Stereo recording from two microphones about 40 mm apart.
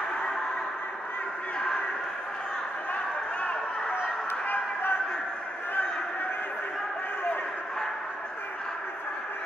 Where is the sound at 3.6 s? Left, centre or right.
Centre.